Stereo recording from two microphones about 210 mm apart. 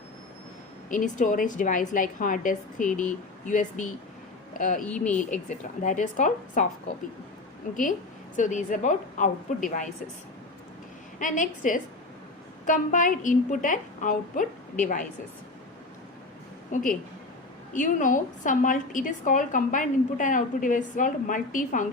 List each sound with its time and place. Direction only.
0.9 s a woman's voice: 40° left (ahead or behind)
4.8 s speech: 5° left (ahead or behind)
5.8 s a woman's voice: 35° left (ahead or behind)
11.2 s a woman's voice: 40° left (ahead or behind)
16.7 s a woman's voice: 35° left (ahead or behind)